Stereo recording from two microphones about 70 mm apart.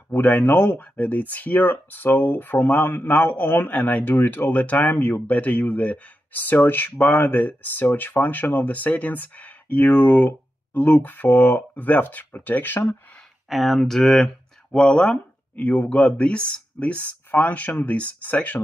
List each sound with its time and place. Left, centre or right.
0.1 s speech: left
13.5 s speech: centre; by 18.6 s left